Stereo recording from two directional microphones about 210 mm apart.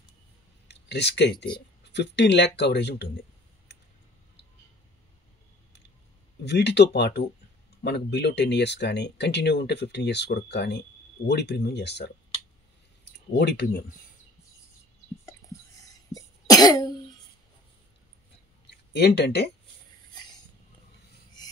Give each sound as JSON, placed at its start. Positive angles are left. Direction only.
{"t": 0.7, "sound": "a sound", "side_deg": 55}
{"t": 1.9, "sound": "speech", "side_deg": 55}
{"t": 6.4, "sound": "speech", "side_deg": 55}
{"t": 13.4, "sound": "speech", "side_deg": 50}
{"t": 15.9, "sound": "cough", "side_deg": 15}
{"t": 18.7, "sound": "speech", "side_deg": 50}